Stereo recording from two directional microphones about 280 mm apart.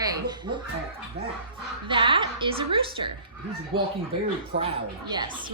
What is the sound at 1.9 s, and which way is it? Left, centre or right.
A woman's voice, centre.